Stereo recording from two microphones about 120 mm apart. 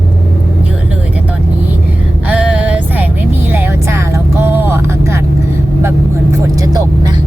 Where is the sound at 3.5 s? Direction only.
20° right (ahead or behind).